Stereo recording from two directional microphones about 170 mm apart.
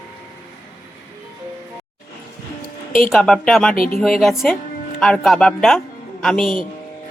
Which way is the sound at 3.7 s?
55° left (ahead or behind).